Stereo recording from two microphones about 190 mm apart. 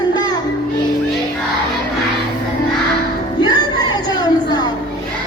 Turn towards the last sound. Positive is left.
turn(degrees=20)  # may be behind; listen again after turning